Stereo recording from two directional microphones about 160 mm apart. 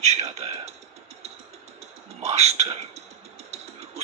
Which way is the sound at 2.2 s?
45° right (ahead or behind).